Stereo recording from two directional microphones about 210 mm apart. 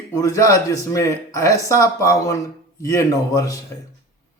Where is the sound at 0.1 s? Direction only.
15° left (ahead or behind).